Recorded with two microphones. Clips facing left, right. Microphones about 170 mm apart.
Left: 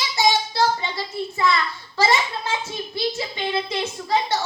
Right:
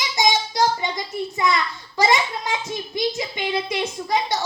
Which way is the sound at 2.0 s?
15° right (ahead or behind).